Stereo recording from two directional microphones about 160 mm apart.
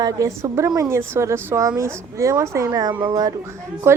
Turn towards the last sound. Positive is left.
turn(degrees=-15)  # may be behind; listen again after turning